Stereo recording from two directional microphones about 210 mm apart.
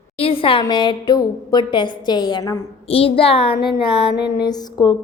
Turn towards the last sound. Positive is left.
turn(degrees=20)  # may be behind; listen again after turning